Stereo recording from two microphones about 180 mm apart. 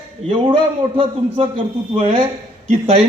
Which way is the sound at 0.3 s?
30° right (ahead or behind).